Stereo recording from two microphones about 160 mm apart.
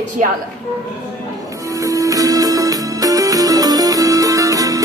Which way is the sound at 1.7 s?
20° right (ahead or behind).